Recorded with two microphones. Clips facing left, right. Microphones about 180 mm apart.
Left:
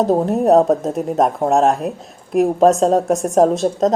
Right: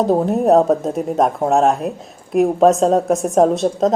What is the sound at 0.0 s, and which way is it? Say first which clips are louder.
Speech: even; centre (ahead or behind).